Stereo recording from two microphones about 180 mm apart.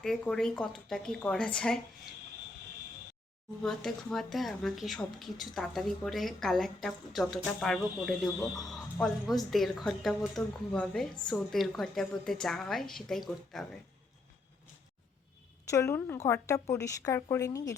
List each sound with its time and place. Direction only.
0.0 s speech: centre (ahead or behind)
3.6 s speech: centre (ahead or behind)
8.4 s speech: 20° left (ahead or behind)
8.7 s speech: centre (ahead or behind)
15.7 s a woman's voice: 15° left (ahead or behind)